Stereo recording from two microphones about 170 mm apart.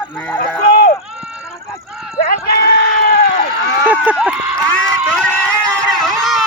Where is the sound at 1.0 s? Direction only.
5° right (ahead or behind).